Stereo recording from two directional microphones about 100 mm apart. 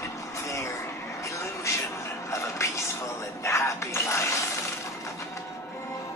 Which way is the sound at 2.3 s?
30° left (ahead or behind).